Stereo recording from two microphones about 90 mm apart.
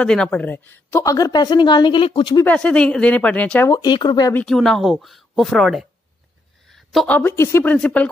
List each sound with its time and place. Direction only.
0.0 s speech: 10° left (ahead or behind)
0.9 s a woman's voice: 40° left (ahead or behind); by 2.3 s 75° left (ahead or behind)
2.4 s speech: 15° left (ahead or behind)
3.8 s speech: 55° left (ahead or behind)
4.5 s speech: 5° left (ahead or behind)
6.7 s a sound: centre (ahead or behind)
7.1 s a woman's voice: 20° left (ahead or behind)